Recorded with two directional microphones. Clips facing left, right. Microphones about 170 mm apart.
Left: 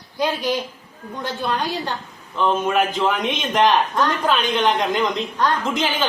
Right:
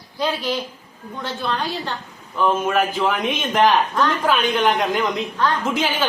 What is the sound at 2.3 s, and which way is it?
A woman's voice, 5° right (ahead or behind).